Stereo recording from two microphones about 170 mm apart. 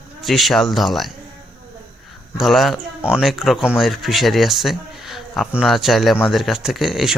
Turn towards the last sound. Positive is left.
turn(degrees=0)  # may be behind; listen again after turning